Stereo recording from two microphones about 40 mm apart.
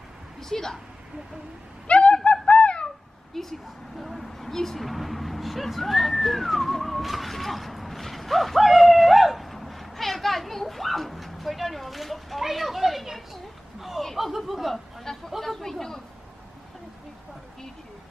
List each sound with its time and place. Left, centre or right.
0.4 s speech: centre
1.9 s a sound: left
2.3 s fowl: left
3.3 s speech: centre